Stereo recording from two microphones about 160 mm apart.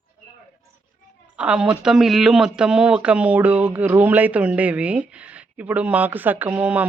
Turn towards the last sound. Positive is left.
turn(degrees=-10)  # may be behind; listen again after turning